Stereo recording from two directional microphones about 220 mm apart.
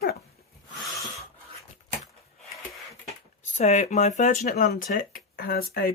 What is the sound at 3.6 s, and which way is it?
Speech, 30° left (ahead or behind).